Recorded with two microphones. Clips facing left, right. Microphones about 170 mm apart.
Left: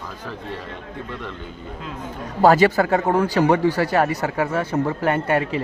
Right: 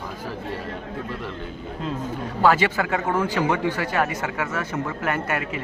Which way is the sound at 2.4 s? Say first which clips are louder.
Left 5 dB; 40° left (ahead or behind).